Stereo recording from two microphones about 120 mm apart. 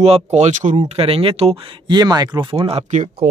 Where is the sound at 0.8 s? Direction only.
55° right (ahead or behind); by 2.5 s 35° right (ahead or behind).